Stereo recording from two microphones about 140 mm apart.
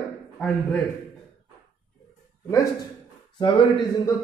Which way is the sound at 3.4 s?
35° left (ahead or behind).